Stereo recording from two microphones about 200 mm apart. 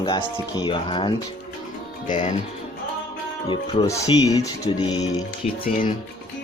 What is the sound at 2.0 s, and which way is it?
Speech, 40° left (ahead or behind).